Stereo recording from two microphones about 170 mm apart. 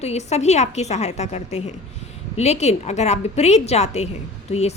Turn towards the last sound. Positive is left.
turn(degrees=40)  # may be behind; listen again after turning